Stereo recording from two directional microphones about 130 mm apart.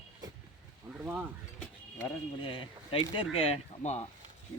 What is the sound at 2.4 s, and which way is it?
Speech, 40° left (ahead or behind).